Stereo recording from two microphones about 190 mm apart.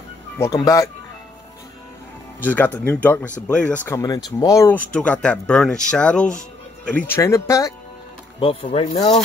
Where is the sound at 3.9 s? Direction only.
20° left (ahead or behind).